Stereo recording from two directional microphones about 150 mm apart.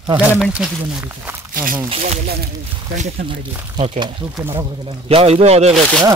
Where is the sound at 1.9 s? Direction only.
45° right (ahead or behind).